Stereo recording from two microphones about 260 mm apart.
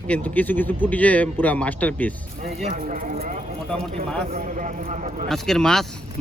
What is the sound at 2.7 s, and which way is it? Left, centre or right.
Speech, right.